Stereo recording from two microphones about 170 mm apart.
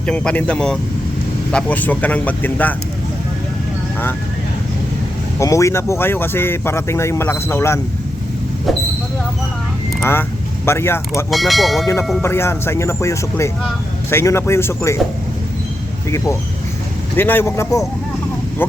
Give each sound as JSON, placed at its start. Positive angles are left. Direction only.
{"t": 0.0, "sound": "speech", "side_deg": 5}
{"t": 5.4, "sound": "speech", "side_deg": 20}
{"t": 10.0, "sound": "speech", "side_deg": 15}
{"t": 11.3, "sound": "speech", "side_deg": 0}
{"t": 12.2, "sound": "speech", "side_deg": 15}
{"t": 16.0, "sound": "speech", "side_deg": 15}